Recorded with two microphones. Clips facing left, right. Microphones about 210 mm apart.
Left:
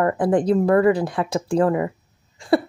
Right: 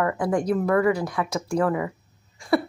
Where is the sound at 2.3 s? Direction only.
30° left (ahead or behind).